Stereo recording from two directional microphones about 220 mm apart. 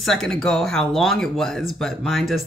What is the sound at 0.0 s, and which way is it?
Speech, centre (ahead or behind).